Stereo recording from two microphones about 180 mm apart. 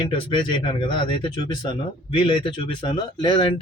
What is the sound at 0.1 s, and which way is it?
Speech, 30° left (ahead or behind).